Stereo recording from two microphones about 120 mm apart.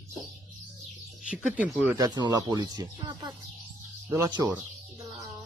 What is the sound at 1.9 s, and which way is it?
Speech, 35° right (ahead or behind).